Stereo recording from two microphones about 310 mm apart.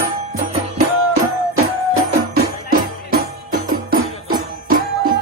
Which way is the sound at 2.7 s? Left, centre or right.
Right.